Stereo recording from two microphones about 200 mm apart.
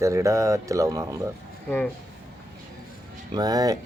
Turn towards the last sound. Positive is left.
turn(degrees=-20)  # may be behind; listen again after turning